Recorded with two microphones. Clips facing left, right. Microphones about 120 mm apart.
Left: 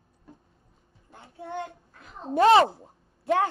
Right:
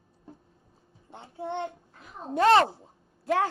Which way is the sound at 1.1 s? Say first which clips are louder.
Right 4 dB; 25° right (ahead or behind).